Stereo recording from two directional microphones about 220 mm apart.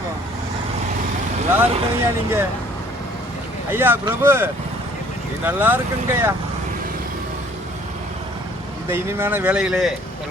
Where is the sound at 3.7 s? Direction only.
10° right (ahead or behind).